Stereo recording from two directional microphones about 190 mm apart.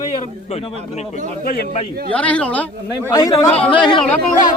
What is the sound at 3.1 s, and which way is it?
Speech, 20° left (ahead or behind).